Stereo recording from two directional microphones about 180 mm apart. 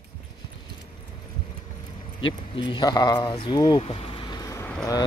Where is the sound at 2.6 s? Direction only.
25° left (ahead or behind).